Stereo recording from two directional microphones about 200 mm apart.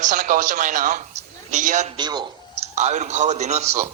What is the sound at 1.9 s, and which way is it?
Speech, 20° right (ahead or behind).